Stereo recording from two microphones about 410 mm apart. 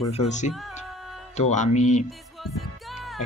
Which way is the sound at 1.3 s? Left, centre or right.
Centre.